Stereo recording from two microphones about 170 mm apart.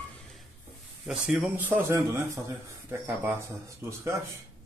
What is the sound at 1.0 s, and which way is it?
Speech, 10° right (ahead or behind).